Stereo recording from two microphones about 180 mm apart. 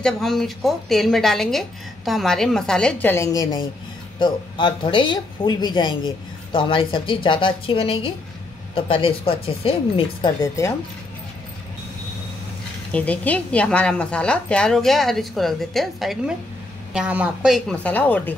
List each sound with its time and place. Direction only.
0.0 s a woman's voice: centre (ahead or behind); by 10.3 s 30° left (ahead or behind)
10.4 s speech: 15° left (ahead or behind)
12.9 s a woman's voice: 10° left (ahead or behind)